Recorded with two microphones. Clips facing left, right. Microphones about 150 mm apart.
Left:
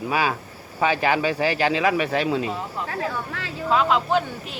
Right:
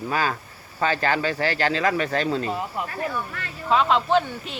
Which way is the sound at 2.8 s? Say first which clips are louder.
Left 1 dB; 90° left.